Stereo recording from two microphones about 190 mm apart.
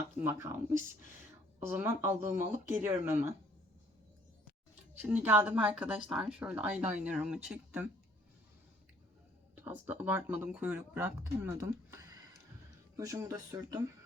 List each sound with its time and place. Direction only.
0.2 s speech: 15° right (ahead or behind)
5.0 s speech: 10° right (ahead or behind)
9.6 s speech: 10° right (ahead or behind)
13.0 s speech: 15° right (ahead or behind)